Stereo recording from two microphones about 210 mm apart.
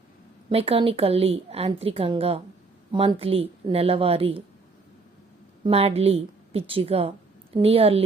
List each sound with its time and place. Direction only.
0.5 s a woman's voice: 25° right (ahead or behind)
5.6 s a woman's voice: 30° right (ahead or behind)